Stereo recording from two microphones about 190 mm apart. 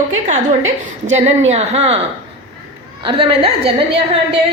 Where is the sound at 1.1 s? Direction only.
35° right (ahead or behind).